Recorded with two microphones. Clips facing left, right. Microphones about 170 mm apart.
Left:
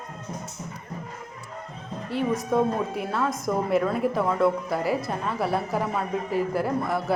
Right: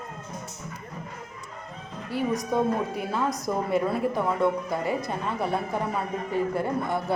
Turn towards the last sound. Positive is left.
turn(degrees=0)  # may be behind; listen again after turning